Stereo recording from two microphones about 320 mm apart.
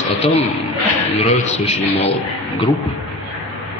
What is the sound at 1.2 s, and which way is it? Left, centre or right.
Speech, centre.